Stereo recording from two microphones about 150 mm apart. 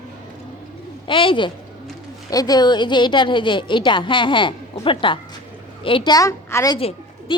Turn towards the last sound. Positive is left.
turn(degrees=35)  # may be behind; listen again after turning